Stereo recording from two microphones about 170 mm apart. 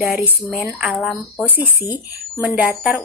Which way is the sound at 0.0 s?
10° right (ahead or behind).